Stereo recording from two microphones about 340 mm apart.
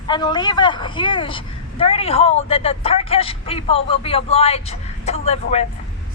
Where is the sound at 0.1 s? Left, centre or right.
Centre.